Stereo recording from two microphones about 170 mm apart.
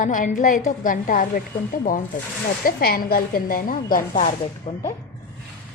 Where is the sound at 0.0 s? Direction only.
50° left (ahead or behind).